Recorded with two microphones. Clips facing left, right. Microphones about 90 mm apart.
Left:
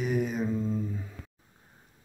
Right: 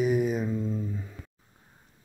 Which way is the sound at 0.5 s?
Centre (ahead or behind).